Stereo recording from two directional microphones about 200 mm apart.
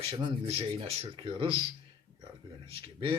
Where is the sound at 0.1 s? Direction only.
30° right (ahead or behind).